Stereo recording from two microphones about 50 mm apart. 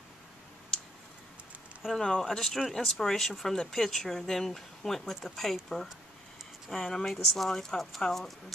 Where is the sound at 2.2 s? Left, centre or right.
Centre.